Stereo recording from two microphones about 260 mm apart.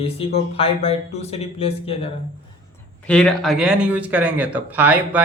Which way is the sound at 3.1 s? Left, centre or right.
Centre.